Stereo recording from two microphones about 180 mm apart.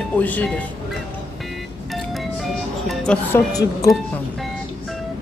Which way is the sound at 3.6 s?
20° left (ahead or behind).